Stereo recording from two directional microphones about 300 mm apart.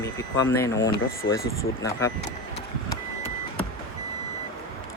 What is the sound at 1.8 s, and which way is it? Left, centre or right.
Speech, centre.